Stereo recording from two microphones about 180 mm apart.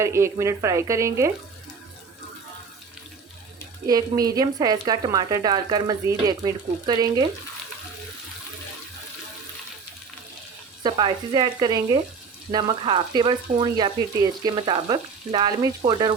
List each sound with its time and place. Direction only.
0.0 s speech: 15° right (ahead or behind)
3.8 s speech: 20° right (ahead or behind)
10.8 s speech: 25° right (ahead or behind)